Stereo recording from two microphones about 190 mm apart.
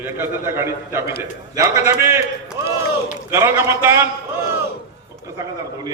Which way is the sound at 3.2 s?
15° right (ahead or behind).